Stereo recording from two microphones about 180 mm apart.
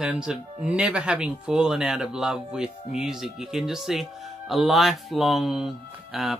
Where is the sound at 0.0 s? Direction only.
5° right (ahead or behind).